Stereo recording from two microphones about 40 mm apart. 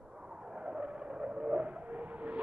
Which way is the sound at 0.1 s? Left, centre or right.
Centre.